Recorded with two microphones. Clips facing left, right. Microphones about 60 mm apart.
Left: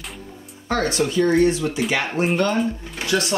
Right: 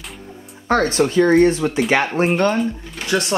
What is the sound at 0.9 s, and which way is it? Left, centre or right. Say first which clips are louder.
Speech: right 4 dB; right.